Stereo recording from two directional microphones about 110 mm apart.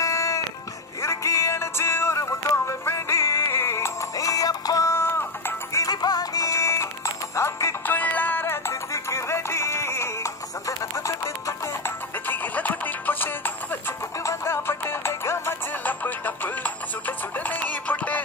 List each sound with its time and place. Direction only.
0.0 s music: 30° left (ahead or behind)
12.3 s music: 15° left (ahead or behind)